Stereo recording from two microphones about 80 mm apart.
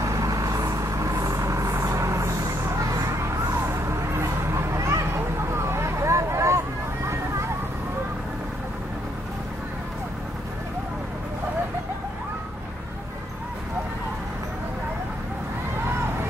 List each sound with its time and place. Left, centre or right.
0.0 s vehicle: right